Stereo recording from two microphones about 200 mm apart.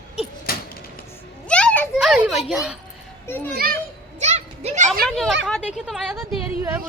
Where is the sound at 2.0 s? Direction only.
5° right (ahead or behind).